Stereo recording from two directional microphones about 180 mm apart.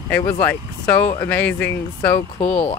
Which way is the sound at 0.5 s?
10° left (ahead or behind).